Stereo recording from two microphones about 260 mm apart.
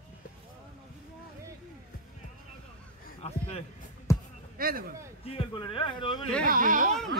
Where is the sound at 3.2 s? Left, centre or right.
Left.